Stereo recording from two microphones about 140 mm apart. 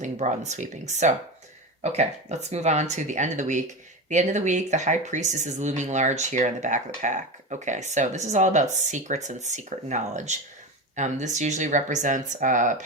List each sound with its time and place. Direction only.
0.0 s speech: 55° right (ahead or behind)